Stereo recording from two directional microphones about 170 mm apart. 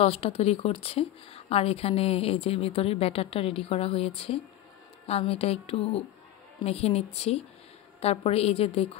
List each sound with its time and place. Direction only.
0.0 s speech: 35° left (ahead or behind)